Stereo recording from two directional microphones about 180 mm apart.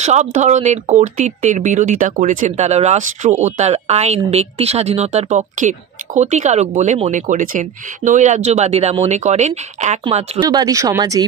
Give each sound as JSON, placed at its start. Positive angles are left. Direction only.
{"t": 0.0, "sound": "speech", "side_deg": -40}
{"t": 10.5, "sound": "speech", "side_deg": -20}